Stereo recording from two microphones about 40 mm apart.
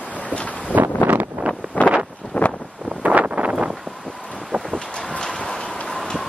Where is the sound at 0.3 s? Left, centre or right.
Left.